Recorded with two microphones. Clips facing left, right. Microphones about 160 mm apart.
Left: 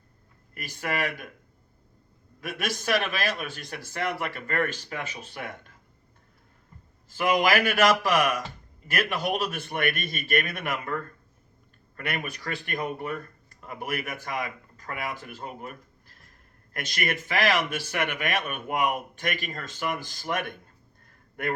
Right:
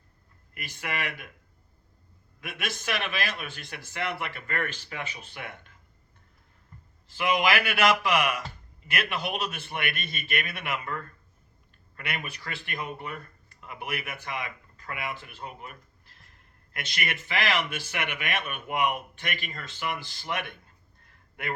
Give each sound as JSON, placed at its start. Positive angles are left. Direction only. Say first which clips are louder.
{"t": 0.5, "sound": "speech", "louder": "left 4 dB", "side_deg": 45}
{"t": 2.4, "sound": "speech", "louder": "left 4 dB", "side_deg": 45}
{"t": 7.1, "sound": "speech", "louder": "left 2 dB", "side_deg": 45}
{"t": 21.0, "sound": "a sound", "louder": "left 6 dB", "side_deg": 45}